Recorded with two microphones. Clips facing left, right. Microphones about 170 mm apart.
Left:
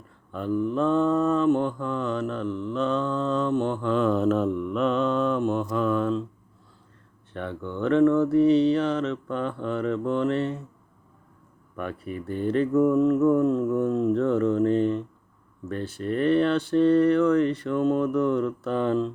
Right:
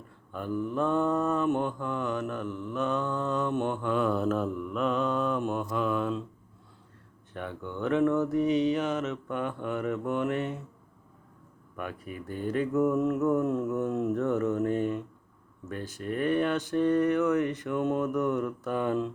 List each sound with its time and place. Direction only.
0.5 s mantra: 20° left (ahead or behind)
0.8 s mantra: 15° right (ahead or behind)
7.3 s mantra: 10° right (ahead or behind)
11.8 s mantra: 10° right (ahead or behind)
13.8 s a sound: 20° right (ahead or behind)
14.2 s mantra: 5° right (ahead or behind)